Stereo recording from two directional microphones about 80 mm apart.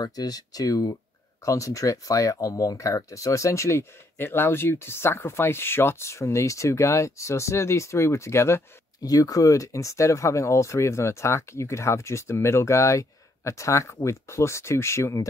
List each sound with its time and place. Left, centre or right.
0.0 s speech: left
9.0 s speech: left